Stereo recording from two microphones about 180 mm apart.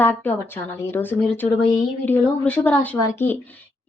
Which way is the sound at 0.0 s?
10° left (ahead or behind).